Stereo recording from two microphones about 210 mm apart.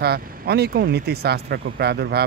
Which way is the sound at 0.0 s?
50° right (ahead or behind).